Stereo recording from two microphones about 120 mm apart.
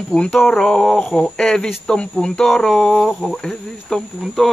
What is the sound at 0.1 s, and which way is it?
Speech, 5° left (ahead or behind).